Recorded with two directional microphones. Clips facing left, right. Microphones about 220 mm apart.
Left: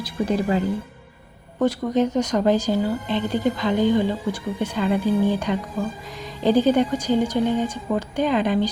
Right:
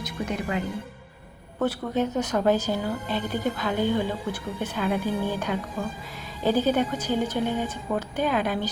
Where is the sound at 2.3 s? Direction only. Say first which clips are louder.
Left 4 dB; 10° left (ahead or behind).